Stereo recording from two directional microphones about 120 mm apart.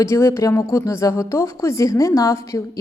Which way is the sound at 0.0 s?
25° left (ahead or behind).